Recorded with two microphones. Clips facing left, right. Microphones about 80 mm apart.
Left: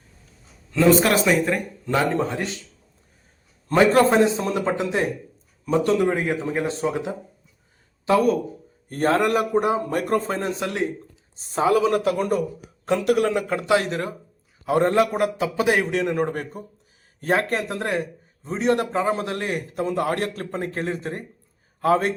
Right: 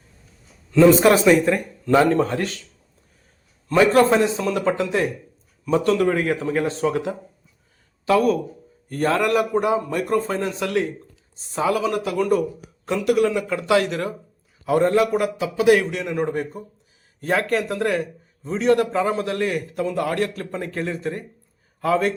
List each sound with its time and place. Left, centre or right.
0.7 s a man's voice: centre
3.8 s a man's voice: left
11.3 s a man's voice: left
13.7 s a man's voice: left
15.9 s a man's voice: left
17.2 s a man's voice: left